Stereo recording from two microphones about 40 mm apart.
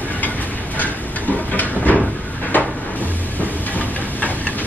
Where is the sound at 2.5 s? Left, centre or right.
Left.